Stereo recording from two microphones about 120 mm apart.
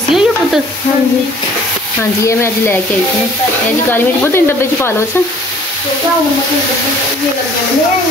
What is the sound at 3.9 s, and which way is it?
Speech, 20° left (ahead or behind).